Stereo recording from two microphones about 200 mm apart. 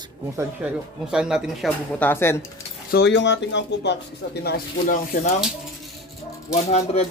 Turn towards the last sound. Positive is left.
turn(degrees=35)  # may be behind; listen again after turning